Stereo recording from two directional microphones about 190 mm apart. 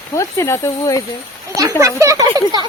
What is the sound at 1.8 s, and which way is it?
Speech, 15° right (ahead or behind).